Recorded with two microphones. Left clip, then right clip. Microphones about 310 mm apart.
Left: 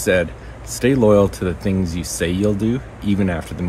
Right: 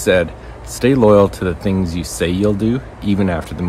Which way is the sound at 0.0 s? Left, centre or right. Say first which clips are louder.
Right 3 dB; centre.